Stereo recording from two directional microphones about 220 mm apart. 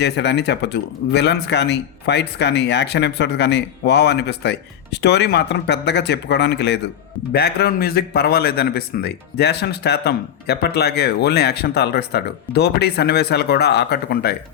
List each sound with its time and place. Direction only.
0.0 s speech: 50° left (ahead or behind)